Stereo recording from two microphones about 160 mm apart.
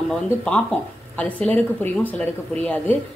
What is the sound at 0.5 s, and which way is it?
Speech, 5° left (ahead or behind).